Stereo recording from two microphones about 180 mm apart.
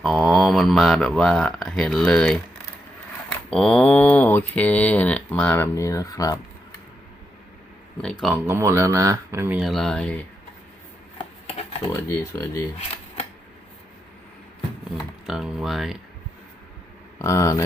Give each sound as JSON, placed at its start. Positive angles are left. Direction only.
{"t": 0.0, "sound": "speech", "side_deg": 0}
{"t": 8.4, "sound": "speech", "side_deg": -15}
{"t": 11.9, "sound": "speech", "side_deg": 15}
{"t": 15.3, "sound": "speech", "side_deg": -5}
{"t": 17.2, "sound": "speech", "side_deg": 15}